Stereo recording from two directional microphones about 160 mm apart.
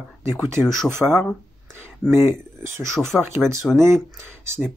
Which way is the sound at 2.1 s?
15° right (ahead or behind).